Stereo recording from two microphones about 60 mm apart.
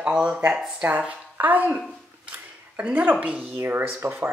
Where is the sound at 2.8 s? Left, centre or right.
Right.